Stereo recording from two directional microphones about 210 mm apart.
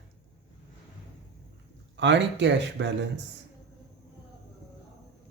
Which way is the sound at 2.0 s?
60° right (ahead or behind).